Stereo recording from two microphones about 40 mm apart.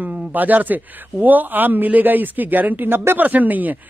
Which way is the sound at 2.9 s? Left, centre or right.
Right.